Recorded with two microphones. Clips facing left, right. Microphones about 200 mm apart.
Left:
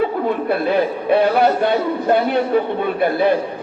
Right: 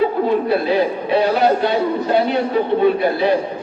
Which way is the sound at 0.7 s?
55° left (ahead or behind).